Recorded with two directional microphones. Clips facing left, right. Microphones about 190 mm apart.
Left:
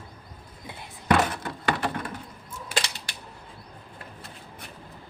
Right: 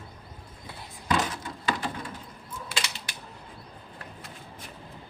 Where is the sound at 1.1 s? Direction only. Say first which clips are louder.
Left 5 dB; 60° left (ahead or behind).